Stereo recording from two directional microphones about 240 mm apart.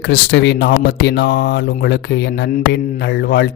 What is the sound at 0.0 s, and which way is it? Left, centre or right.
Speech, left.